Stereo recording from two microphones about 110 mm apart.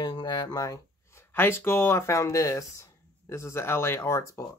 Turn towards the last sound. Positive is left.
turn(degrees=25)  # may be behind; listen again after turning